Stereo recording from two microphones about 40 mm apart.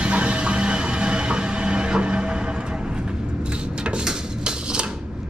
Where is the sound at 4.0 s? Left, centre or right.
Right.